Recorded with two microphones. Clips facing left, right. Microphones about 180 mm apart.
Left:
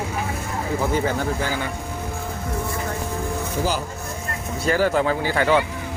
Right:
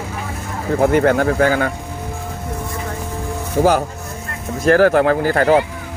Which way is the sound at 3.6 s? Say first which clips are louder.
Right 12 dB; 70° right (ahead or behind).